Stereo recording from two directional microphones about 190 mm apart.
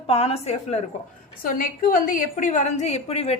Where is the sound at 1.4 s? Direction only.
45° left (ahead or behind).